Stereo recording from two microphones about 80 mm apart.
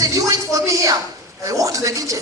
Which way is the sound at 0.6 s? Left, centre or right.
Right.